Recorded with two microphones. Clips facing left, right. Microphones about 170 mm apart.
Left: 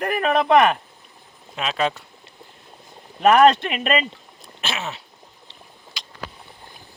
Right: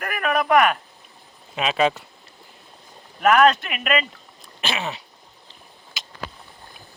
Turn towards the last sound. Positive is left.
turn(degrees=-5)  # may be behind; listen again after turning